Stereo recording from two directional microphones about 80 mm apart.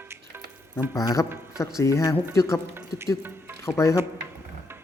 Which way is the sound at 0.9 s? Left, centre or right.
Left.